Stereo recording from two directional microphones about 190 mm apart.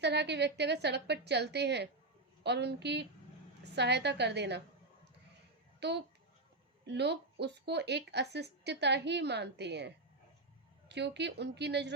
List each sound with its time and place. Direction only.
0.0 s speech: 65° right (ahead or behind)
5.8 s speech: 60° right (ahead or behind)